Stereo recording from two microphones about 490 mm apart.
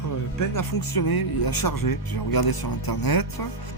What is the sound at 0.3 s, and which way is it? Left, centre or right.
Speech, left.